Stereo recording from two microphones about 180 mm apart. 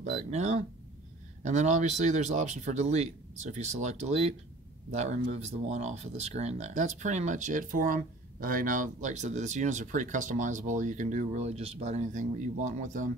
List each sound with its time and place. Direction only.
0.3 s speech: 40° right (ahead or behind)